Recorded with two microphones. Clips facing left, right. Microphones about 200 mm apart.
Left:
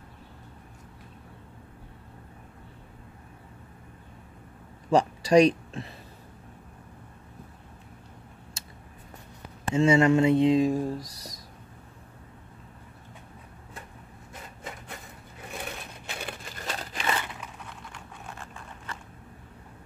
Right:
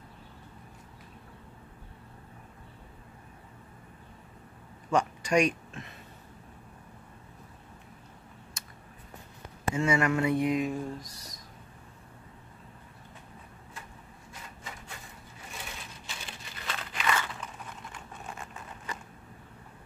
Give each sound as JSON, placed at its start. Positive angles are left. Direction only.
{"t": 4.9, "sound": "speech", "side_deg": 35}
{"t": 8.6, "sound": "a sound", "side_deg": 30}
{"t": 9.8, "sound": "speech", "side_deg": 25}
{"t": 15.5, "sound": "crumpling", "side_deg": 60}
{"t": 18.4, "sound": "vehicle", "side_deg": -5}